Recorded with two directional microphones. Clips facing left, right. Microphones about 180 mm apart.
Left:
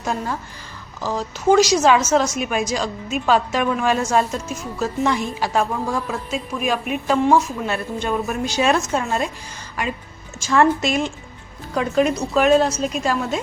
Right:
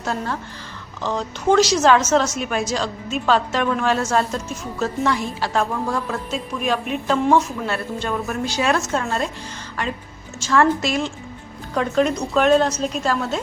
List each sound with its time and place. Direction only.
0.0 s a woman's voice: 15° left (ahead or behind)
10.4 s a woman's voice: 20° left (ahead or behind)
11.7 s a woman's voice: 5° left (ahead or behind)